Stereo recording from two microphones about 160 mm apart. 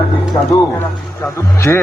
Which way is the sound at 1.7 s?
10° left (ahead or behind).